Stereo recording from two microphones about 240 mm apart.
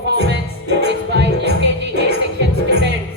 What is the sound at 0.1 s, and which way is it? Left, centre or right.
Music, right.